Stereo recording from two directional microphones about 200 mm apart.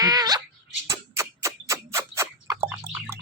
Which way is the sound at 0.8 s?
15° right (ahead or behind).